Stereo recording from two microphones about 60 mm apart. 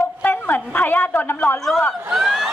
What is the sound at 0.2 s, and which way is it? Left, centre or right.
A woman's voice, left.